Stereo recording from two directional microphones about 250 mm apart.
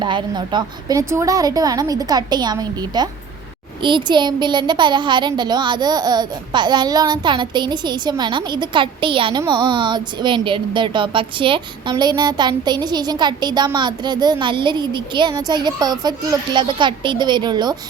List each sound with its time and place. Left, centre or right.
0.0 s a child's voice: centre